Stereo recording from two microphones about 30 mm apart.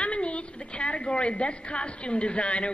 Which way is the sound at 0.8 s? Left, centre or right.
Left.